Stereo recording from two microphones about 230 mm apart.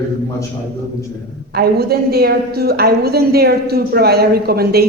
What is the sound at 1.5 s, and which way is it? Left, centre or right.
A woman's voice, right.